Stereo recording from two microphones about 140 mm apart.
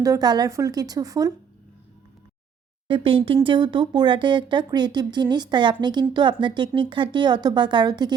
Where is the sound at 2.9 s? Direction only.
40° right (ahead or behind).